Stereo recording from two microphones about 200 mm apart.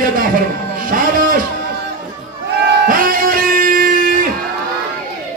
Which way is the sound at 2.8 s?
45° right (ahead or behind).